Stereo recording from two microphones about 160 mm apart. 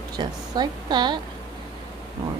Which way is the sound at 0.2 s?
25° right (ahead or behind).